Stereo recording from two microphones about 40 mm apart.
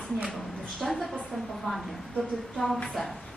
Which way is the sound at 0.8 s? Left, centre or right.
Centre.